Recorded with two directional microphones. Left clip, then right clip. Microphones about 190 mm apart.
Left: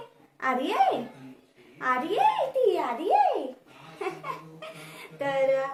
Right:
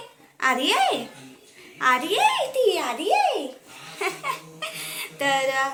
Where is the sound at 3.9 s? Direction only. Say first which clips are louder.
Right 6 dB; 15° right (ahead or behind).